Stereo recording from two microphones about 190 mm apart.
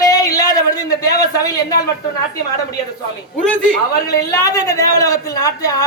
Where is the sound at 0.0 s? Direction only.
20° left (ahead or behind).